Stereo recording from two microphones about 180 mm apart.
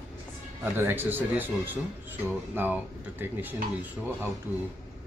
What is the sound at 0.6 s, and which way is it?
Speech, 10° right (ahead or behind).